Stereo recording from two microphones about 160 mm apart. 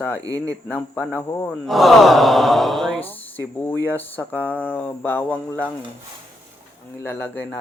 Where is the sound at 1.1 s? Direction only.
15° left (ahead or behind).